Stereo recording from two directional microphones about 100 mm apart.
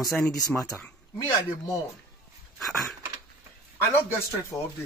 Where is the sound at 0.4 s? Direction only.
30° left (ahead or behind).